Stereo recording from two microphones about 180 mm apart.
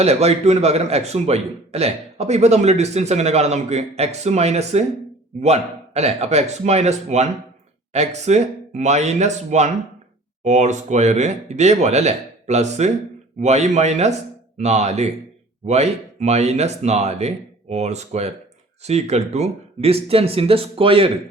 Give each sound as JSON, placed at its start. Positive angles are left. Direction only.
{"t": 0.0, "sound": "a man's voice", "side_deg": -35}